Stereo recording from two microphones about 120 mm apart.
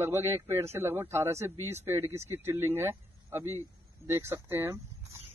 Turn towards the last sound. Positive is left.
turn(degrees=-20)  # may be behind; listen again after turning